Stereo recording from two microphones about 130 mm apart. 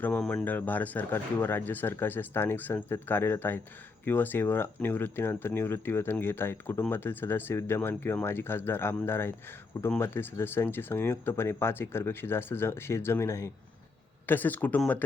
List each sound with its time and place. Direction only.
0.0 s speech: 10° left (ahead or behind)